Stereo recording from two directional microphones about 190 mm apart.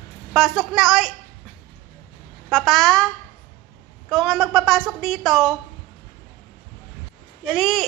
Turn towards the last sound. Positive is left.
turn(degrees=0)  # may be behind; listen again after turning